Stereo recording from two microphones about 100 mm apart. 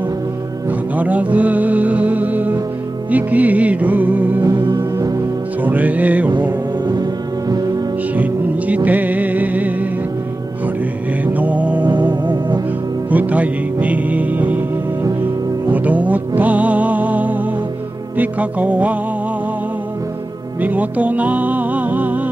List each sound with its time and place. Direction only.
0.7 s music: 15° right (ahead or behind)
4.4 s music: 45° right (ahead or behind)
5.6 s music: 15° right (ahead or behind)
6.9 s music: 40° right (ahead or behind)
8.1 s music: 15° right (ahead or behind)
11.3 s music: 15° right (ahead or behind)
11.8 s music: 50° right (ahead or behind)
13.1 s music: 15° right (ahead or behind)
15.7 s music: 15° right (ahead or behind)
20.6 s music: 15° right (ahead or behind)